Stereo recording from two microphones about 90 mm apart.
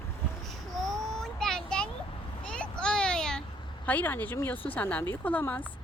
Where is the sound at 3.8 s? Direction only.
15° left (ahead or behind).